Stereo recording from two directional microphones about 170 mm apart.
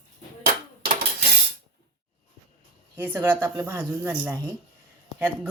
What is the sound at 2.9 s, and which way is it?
Speech, 10° right (ahead or behind).